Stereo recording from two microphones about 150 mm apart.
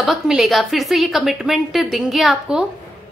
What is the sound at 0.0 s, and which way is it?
A woman's voice, centre (ahead or behind).